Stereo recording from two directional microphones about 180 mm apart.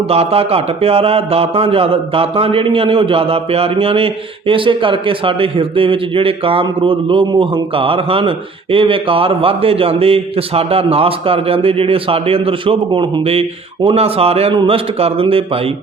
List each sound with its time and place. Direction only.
0.1 s speech: 35° right (ahead or behind)